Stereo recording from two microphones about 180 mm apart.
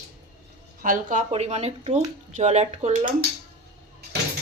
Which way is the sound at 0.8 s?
45° right (ahead or behind).